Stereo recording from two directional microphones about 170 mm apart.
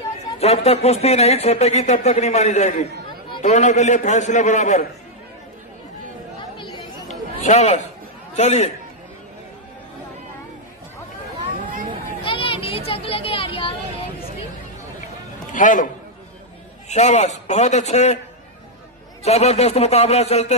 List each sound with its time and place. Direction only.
0.4 s a man's voice: 35° left (ahead or behind)
6.5 s chatter: 30° left (ahead or behind)
7.1 s chatter: 45° left (ahead or behind)
8.4 s speech: 40° left (ahead or behind)
12.3 s a sound: 30° left (ahead or behind)
15.5 s a man's voice: 50° left (ahead or behind)
16.9 s speech: 40° left (ahead or behind)
19.2 s speech: 40° left (ahead or behind)